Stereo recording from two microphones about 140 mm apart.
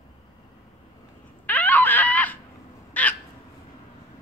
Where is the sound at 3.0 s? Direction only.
10° left (ahead or behind).